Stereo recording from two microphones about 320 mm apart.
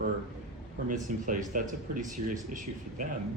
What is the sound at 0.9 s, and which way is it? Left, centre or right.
Speech, right.